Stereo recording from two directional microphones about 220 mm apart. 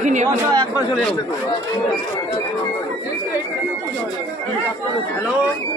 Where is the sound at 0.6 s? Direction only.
5° left (ahead or behind).